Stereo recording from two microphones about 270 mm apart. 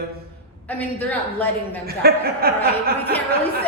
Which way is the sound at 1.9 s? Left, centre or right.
Right.